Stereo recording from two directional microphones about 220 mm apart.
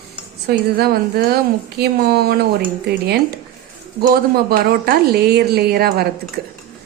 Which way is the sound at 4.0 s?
40° right (ahead or behind).